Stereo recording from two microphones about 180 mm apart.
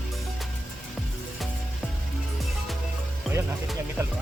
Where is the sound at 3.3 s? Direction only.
Centre (ahead or behind).